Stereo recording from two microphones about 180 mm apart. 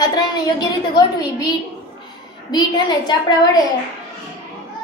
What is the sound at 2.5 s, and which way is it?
Speech, 25° left (ahead or behind).